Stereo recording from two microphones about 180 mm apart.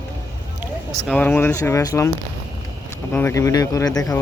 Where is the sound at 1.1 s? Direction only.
10° left (ahead or behind).